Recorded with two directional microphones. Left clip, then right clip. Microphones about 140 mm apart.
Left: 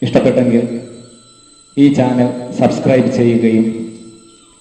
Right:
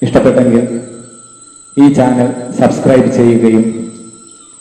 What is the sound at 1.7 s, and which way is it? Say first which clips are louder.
A man's voice: right 3 dB; 45° right (ahead or behind).